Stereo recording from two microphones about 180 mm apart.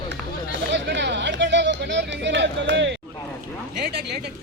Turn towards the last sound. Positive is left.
turn(degrees=-65)  # may be behind; listen again after turning